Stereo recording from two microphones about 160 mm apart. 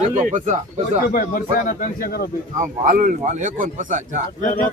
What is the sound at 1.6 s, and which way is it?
Speech, 55° left (ahead or behind).